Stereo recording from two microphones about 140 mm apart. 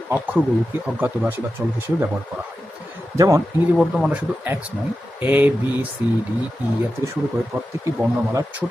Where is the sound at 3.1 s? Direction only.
25° right (ahead or behind).